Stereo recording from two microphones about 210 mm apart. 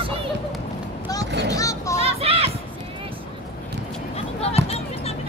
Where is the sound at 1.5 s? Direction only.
15° left (ahead or behind).